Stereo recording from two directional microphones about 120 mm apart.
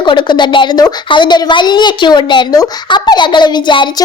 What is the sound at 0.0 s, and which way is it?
Speech, 40° left (ahead or behind).